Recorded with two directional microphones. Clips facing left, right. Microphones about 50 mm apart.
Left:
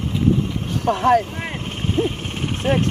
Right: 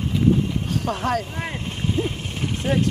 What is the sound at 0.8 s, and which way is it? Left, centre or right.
Speech, left.